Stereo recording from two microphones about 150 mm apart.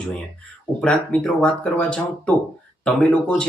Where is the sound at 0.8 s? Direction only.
5° left (ahead or behind).